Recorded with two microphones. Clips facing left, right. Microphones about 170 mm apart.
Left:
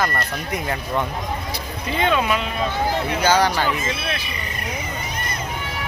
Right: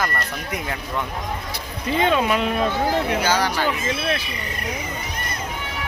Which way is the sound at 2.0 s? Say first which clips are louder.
Right 1 dB; 35° right (ahead or behind).